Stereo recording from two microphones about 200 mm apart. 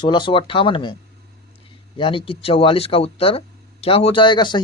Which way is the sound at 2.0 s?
25° left (ahead or behind).